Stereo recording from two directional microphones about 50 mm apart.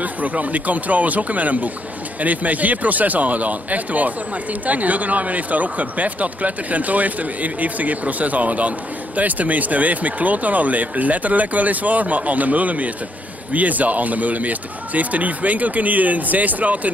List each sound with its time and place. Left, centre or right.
0.0 s speech: right